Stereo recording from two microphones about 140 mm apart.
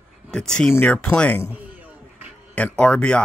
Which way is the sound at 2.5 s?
10° left (ahead or behind).